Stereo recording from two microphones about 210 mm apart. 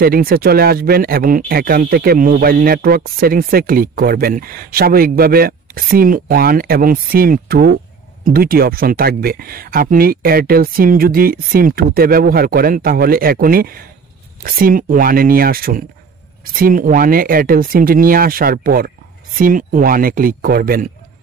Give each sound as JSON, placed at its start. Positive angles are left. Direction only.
{"t": 0.0, "sound": "speech", "side_deg": -45}